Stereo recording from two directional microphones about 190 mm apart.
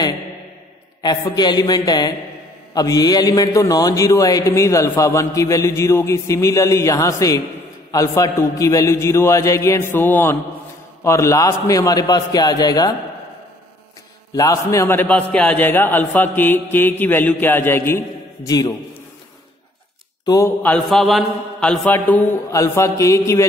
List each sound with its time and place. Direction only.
1.0 s a man's voice: 20° left (ahead or behind)
14.3 s a man's voice: 20° left (ahead or behind)
20.2 s a man's voice: 15° left (ahead or behind)